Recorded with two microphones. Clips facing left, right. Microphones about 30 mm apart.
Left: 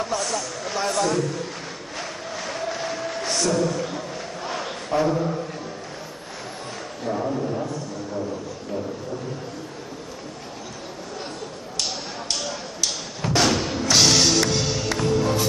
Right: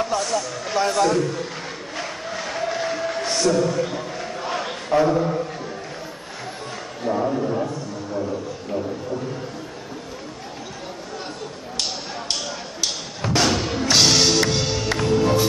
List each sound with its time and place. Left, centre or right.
0.0 s a man's voice: centre
2.0 s a sound: centre
4.9 s a man's voice: centre
7.1 s a man's voice: centre
12.8 s music: centre